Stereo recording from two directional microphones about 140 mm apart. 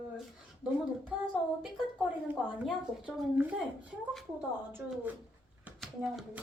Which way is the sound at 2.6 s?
10° right (ahead or behind).